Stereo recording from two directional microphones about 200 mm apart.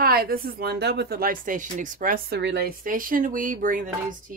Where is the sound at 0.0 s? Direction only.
50° right (ahead or behind).